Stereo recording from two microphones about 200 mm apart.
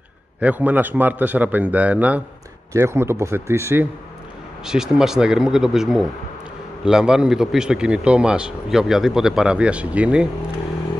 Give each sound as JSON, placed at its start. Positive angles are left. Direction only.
{"t": 0.4, "sound": "a man's voice", "side_deg": -10}
{"t": 4.6, "sound": "a man's voice", "side_deg": -5}